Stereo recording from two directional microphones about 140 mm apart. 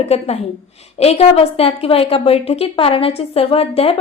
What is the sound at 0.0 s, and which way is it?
A woman's voice, 50° left (ahead or behind).